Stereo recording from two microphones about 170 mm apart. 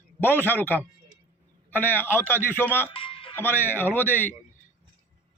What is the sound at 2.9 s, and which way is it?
Music, 30° left (ahead or behind).